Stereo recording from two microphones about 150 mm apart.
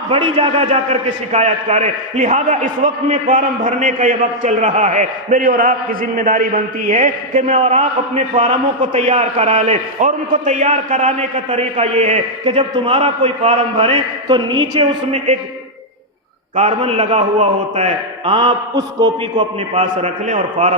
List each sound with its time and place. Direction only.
0.1 s a man's voice: 35° right (ahead or behind)
0.7 s a man's voice: 45° right (ahead or behind)
9.5 s a man's voice: 55° right (ahead or behind)
11.4 s a man's voice: 45° right (ahead or behind)
16.6 s a man's voice: 45° right (ahead or behind)
18.3 s a man's voice: 35° right (ahead or behind)
19.7 s a man's voice: 50° right (ahead or behind)